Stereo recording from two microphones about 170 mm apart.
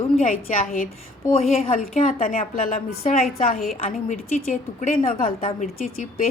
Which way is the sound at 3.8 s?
40° left (ahead or behind).